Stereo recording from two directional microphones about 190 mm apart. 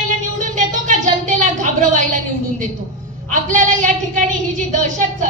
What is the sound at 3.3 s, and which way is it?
A woman's voice, 40° right (ahead or behind).